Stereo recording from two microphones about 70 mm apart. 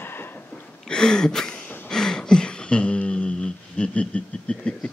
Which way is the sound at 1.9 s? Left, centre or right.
Centre.